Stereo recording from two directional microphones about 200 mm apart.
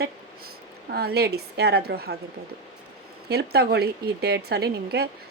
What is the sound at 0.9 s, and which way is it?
A woman's voice, 50° right (ahead or behind).